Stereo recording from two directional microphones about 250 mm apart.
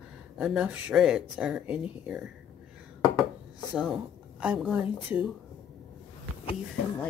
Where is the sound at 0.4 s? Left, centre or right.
Centre.